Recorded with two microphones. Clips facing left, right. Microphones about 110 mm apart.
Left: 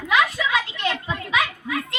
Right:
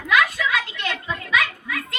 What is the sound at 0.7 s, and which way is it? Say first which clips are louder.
Children playing: left 2 dB; 30° left (ahead or behind).